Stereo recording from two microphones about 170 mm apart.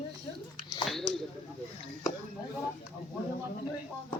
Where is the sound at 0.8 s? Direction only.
Centre (ahead or behind).